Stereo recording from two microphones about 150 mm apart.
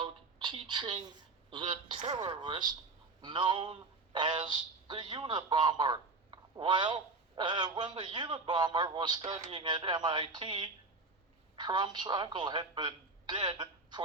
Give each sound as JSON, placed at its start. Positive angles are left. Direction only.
{"t": 0.0, "sound": "a sound", "side_deg": -30}
{"t": 0.7, "sound": "speech", "side_deg": -30}
{"t": 9.2, "sound": "speech", "side_deg": -45}
{"t": 9.6, "sound": "a woman's voice", "side_deg": -30}